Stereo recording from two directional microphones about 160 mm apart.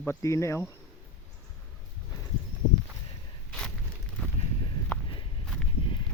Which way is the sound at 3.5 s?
5° left (ahead or behind).